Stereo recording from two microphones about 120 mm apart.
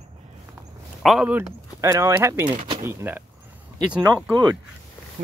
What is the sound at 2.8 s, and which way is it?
Speech, 15° right (ahead or behind).